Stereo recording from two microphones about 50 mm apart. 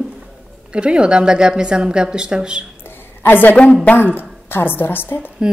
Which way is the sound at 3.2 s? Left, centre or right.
Left.